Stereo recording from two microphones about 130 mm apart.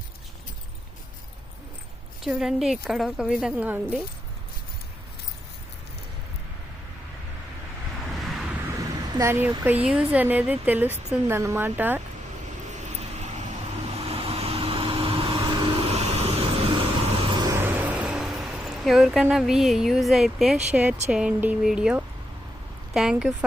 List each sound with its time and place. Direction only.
2.2 s speech: 5° right (ahead or behind)
8.1 s waves: centre (ahead or behind)
8.8 s speech: 25° right (ahead or behind)
12.7 s vehicle: 60° right (ahead or behind)
13.9 s vehicle: 50° right (ahead or behind)
17.5 s vehicle: 15° right (ahead or behind)
20.7 s speech: 10° right (ahead or behind)